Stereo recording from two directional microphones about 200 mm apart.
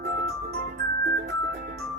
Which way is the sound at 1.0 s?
55° right (ahead or behind).